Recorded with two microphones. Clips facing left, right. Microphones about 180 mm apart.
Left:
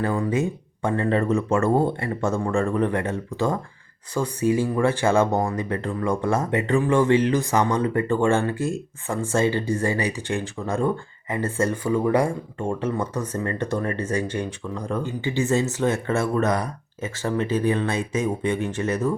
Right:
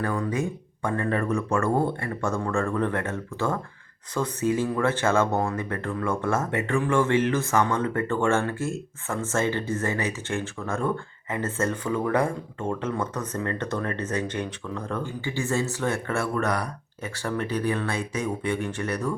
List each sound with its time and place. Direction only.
0.3 s speech: 25° left (ahead or behind)